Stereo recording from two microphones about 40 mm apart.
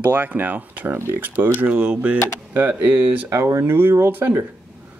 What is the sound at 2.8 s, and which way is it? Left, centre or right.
Speech, right.